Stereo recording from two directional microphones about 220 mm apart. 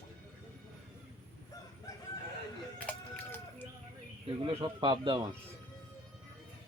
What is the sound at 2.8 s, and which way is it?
Run, 5° left (ahead or behind).